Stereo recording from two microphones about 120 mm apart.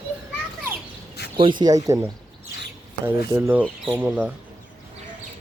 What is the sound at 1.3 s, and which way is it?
Speech, 40° right (ahead or behind).